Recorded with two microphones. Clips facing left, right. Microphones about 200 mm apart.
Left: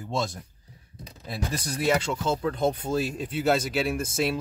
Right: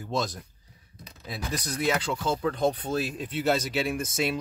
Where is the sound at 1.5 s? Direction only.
30° left (ahead or behind).